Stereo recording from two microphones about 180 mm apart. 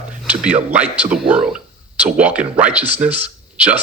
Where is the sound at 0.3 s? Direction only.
5° right (ahead or behind).